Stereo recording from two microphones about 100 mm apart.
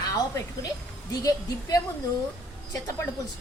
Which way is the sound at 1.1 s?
40° left (ahead or behind).